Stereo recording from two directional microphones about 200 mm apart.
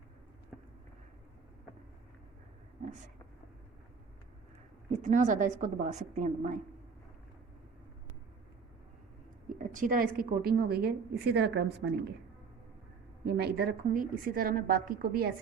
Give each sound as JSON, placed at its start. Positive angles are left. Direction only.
{"t": 4.9, "sound": "a woman's voice", "side_deg": -35}
{"t": 9.5, "sound": "a woman's voice", "side_deg": -40}
{"t": 13.2, "sound": "a woman's voice", "side_deg": -55}